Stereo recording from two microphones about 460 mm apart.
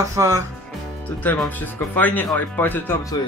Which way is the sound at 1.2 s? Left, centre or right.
Centre.